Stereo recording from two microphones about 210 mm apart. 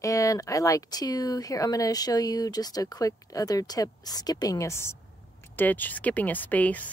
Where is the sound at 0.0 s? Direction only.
15° left (ahead or behind).